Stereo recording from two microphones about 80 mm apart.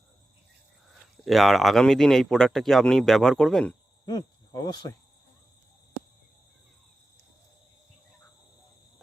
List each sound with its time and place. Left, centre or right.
1.2 s speech: centre
4.0 s cricket: left